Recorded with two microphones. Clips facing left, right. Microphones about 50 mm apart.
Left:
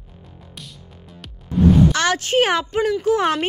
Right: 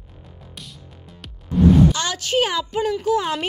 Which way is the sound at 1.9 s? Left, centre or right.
Left.